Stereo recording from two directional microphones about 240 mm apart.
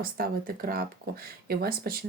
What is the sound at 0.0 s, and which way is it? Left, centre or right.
Speech, right.